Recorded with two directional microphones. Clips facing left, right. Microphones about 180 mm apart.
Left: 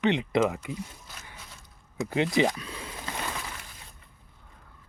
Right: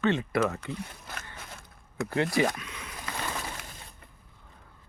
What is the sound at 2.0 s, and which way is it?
Speech, 20° left (ahead or behind).